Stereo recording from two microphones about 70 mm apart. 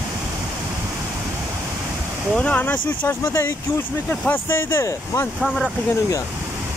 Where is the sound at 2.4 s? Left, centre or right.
Left.